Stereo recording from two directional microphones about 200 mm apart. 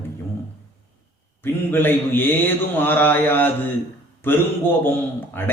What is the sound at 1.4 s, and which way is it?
Speech, 10° left (ahead or behind).